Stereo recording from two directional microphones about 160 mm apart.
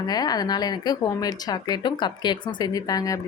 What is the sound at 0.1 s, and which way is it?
Speech, 25° left (ahead or behind).